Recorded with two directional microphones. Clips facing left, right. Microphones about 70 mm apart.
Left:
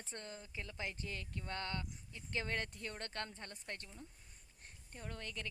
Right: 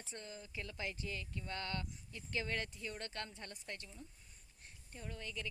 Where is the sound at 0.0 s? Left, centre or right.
Left.